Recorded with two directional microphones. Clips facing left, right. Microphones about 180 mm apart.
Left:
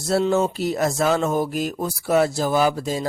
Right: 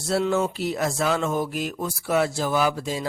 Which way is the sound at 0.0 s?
40° left (ahead or behind).